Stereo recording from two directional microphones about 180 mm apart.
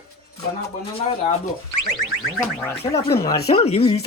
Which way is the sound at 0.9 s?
35° left (ahead or behind).